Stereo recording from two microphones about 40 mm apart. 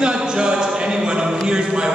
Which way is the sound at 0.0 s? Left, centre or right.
Right.